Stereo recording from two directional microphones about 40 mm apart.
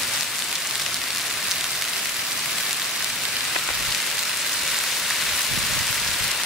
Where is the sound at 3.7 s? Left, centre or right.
Centre.